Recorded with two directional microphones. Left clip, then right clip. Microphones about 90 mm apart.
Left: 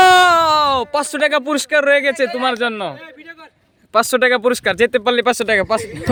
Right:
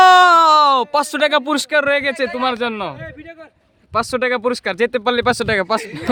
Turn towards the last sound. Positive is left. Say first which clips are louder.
# left 1 dB
turn(degrees=-25)  # may be behind; listen again after turning